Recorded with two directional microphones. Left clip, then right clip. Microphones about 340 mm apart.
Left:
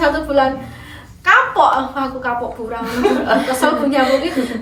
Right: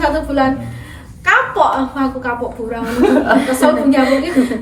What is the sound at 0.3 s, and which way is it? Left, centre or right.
A woman's voice, centre.